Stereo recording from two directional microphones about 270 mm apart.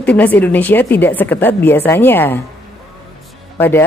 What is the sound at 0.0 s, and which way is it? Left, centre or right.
Speech, centre.